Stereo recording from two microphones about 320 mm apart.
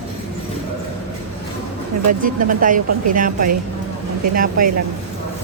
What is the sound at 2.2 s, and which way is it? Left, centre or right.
A woman's voice, right.